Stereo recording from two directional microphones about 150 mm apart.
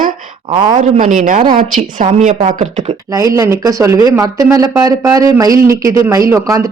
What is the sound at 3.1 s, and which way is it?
Speech, 25° right (ahead or behind).